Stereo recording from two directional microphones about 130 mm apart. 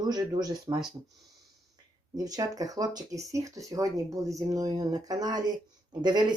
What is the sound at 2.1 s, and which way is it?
Speech, 30° right (ahead or behind).